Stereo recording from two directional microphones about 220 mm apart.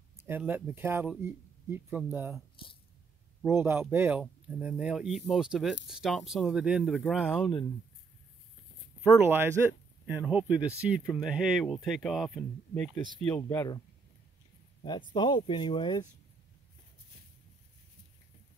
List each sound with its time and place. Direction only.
0.2 s speech: 10° right (ahead or behind)
3.4 s speech: 10° right (ahead or behind)
9.2 s speech: 10° right (ahead or behind); by 13.7 s 15° left (ahead or behind)
14.8 s speech: 20° left (ahead or behind)